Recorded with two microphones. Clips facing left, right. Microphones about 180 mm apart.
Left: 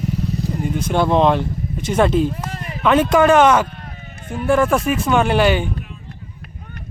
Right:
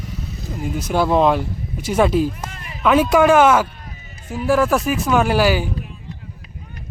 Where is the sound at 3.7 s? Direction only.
55° left (ahead or behind).